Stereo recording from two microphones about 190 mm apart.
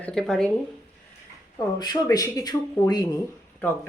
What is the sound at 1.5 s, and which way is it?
Speech, 20° left (ahead or behind).